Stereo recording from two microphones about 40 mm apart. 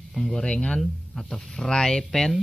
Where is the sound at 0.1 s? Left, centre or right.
Centre.